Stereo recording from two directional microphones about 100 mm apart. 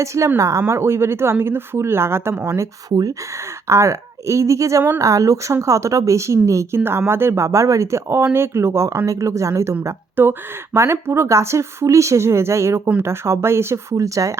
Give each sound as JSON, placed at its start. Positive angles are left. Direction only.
{"t": 0.0, "sound": "speech", "side_deg": -30}
{"t": 3.7, "sound": "speech", "side_deg": -30}